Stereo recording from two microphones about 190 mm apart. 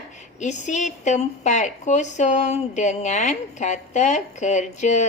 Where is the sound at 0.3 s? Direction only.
40° left (ahead or behind).